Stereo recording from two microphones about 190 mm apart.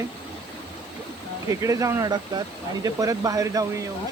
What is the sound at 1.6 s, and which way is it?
Speech, 15° right (ahead or behind).